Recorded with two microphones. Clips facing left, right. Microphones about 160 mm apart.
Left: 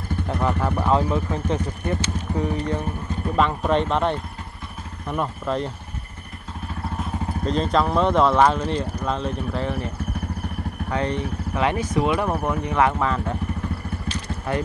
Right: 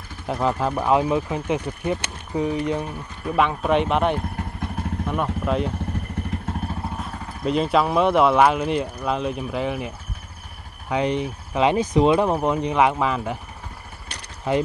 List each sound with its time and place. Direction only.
0.3 s speech: 15° right (ahead or behind)
7.4 s speech: 10° right (ahead or behind)
10.9 s speech: 15° right (ahead or behind)